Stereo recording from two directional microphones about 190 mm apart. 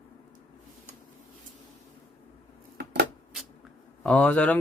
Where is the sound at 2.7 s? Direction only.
60° right (ahead or behind).